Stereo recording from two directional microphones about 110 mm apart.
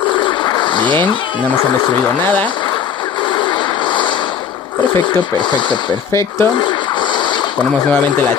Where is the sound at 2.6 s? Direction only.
45° left (ahead or behind).